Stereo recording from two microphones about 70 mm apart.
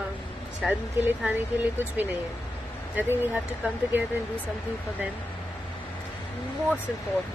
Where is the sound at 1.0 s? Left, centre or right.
Right.